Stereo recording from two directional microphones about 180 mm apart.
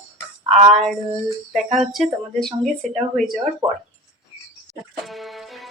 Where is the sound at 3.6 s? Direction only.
30° right (ahead or behind).